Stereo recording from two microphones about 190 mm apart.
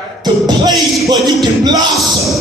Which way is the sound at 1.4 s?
20° right (ahead or behind).